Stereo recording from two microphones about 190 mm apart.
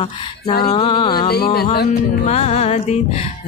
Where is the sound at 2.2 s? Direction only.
35° left (ahead or behind).